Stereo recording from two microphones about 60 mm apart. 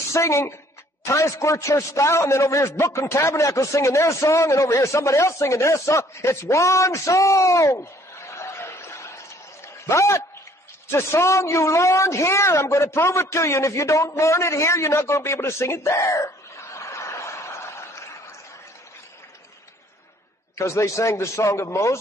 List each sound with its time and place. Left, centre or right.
0.1 s a man's voice: left
16.7 s a sound: left
20.5 s a man's voice: left